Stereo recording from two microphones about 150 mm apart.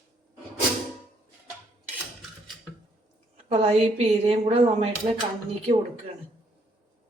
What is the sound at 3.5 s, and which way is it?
A woman's voice, 45° right (ahead or behind).